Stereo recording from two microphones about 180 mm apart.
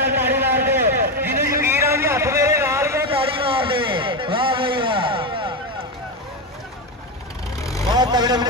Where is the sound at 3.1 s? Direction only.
30° right (ahead or behind).